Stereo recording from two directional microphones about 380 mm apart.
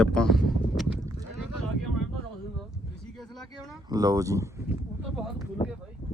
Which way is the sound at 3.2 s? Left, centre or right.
Centre.